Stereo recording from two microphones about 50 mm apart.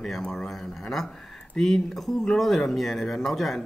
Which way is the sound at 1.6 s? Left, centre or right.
Centre.